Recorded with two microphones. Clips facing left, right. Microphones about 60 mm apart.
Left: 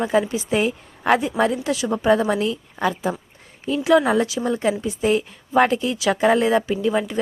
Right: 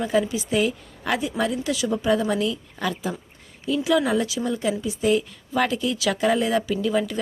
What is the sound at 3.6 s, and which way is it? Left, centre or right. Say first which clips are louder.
A woman's voice: left 4 dB; left.